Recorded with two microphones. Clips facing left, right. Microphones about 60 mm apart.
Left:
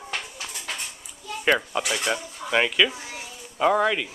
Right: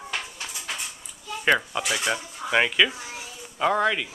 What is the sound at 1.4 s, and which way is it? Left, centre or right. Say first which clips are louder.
A man's voice: even; centre.